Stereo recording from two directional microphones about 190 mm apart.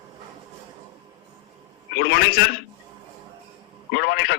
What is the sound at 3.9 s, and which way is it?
Speech, 60° left (ahead or behind).